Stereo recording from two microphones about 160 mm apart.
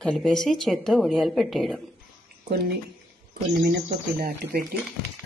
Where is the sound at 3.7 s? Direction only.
70° right (ahead or behind).